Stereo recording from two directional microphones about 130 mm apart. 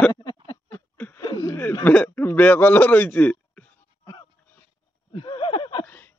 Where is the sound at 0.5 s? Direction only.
20° left (ahead or behind).